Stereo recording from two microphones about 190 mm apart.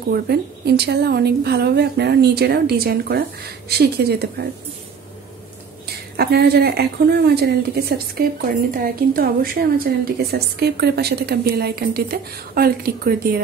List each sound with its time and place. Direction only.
0.1 s a woman's voice: 60° right (ahead or behind)
6.1 s a woman's voice: 55° right (ahead or behind)